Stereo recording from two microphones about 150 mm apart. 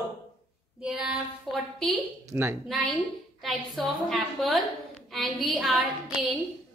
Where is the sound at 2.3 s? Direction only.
15° right (ahead or behind).